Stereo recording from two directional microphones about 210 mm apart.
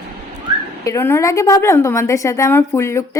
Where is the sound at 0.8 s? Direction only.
15° left (ahead or behind).